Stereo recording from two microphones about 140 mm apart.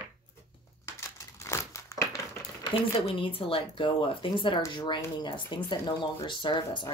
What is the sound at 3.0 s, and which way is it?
Speech, 40° left (ahead or behind).